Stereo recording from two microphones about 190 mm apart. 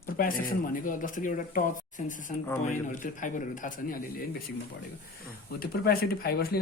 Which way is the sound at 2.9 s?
45° left (ahead or behind).